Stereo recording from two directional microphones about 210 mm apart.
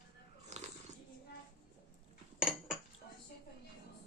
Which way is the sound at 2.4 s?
Centre (ahead or behind).